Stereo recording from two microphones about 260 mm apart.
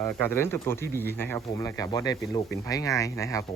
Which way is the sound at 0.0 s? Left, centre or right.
Centre.